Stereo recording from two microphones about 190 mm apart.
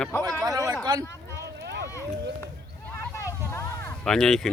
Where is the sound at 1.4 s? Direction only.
65° right (ahead or behind).